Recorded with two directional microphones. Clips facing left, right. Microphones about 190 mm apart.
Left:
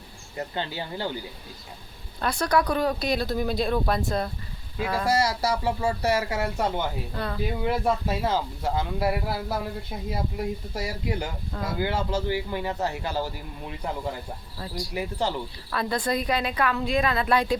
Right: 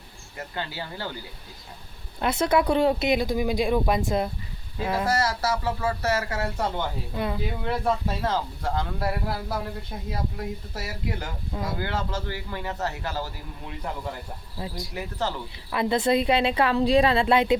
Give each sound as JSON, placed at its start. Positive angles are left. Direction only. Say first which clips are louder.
{"t": 0.3, "sound": "speech", "louder": "left 3 dB", "side_deg": 20}
{"t": 2.1, "sound": "speech", "louder": "right 2 dB", "side_deg": -20}
{"t": 5.0, "sound": "a man's voice", "louder": "left 3 dB", "side_deg": 10}
{"t": 7.1, "sound": "speech", "louder": "right 2 dB", "side_deg": -15}
{"t": 7.6, "sound": "a man's voice", "louder": "left 1 dB", "side_deg": 10}
{"t": 14.6, "sound": "speech", "louder": "even", "side_deg": -20}
{"t": 14.9, "sound": "a man's voice", "louder": "left 3 dB", "side_deg": 15}
{"t": 15.7, "sound": "speech", "louder": "right 4 dB", "side_deg": -20}